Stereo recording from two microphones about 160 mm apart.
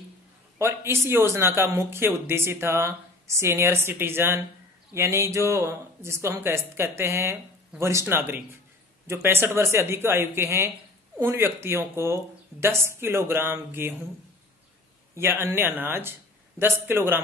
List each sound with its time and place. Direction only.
0.6 s speech: 15° right (ahead or behind)
15.1 s speech: 15° right (ahead or behind)